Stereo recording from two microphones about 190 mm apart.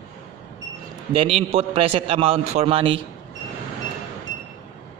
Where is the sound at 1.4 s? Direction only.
30° right (ahead or behind).